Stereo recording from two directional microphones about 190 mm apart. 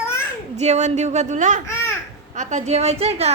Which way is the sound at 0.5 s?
35° right (ahead or behind).